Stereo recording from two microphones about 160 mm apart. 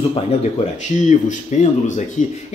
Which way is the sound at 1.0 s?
50° left (ahead or behind).